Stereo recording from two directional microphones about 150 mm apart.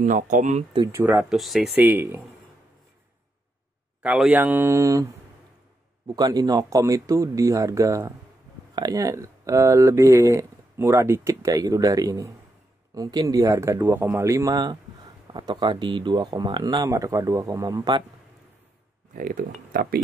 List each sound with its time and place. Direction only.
0.0 s speech: 60° right (ahead or behind)
0.9 s speech: 15° right (ahead or behind)
1.3 s speech: centre (ahead or behind)
1.8 s speech: 15° right (ahead or behind)
4.0 s speech: 5° right (ahead or behind)
6.0 s speech: 25° right (ahead or behind)
19.1 s speech: 70° right (ahead or behind)